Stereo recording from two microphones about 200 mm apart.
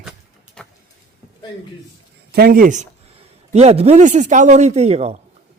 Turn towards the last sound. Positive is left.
turn(degrees=-30)  # may be behind; listen again after turning